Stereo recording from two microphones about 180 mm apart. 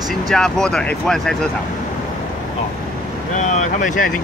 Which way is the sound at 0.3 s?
5° left (ahead or behind).